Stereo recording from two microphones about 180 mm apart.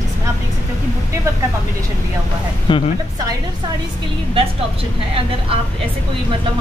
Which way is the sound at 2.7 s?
25° left (ahead or behind).